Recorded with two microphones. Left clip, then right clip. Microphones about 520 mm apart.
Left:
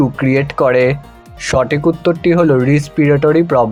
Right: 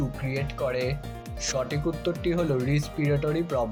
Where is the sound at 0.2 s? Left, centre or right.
Right.